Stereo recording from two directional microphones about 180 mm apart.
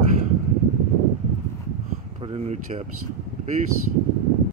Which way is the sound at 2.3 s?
40° right (ahead or behind).